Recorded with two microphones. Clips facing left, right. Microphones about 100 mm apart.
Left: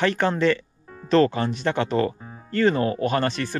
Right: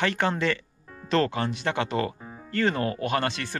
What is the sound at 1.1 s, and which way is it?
Speech, 25° left (ahead or behind).